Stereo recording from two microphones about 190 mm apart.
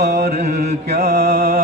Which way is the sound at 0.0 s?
60° right (ahead or behind).